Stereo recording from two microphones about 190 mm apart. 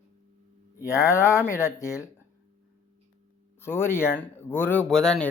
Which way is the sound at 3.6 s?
10° left (ahead or behind).